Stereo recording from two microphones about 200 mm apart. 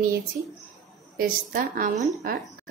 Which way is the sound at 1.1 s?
45° right (ahead or behind).